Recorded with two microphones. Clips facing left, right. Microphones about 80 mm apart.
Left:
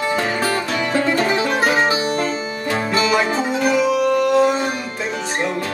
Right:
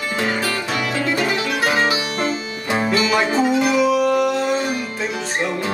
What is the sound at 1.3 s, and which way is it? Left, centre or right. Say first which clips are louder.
Music: left 2 dB; left.